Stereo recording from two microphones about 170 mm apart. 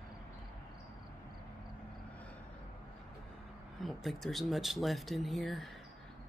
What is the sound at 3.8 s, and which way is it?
Speech, centre (ahead or behind).